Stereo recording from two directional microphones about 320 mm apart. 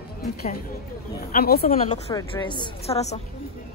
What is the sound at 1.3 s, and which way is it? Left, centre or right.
Speech, left.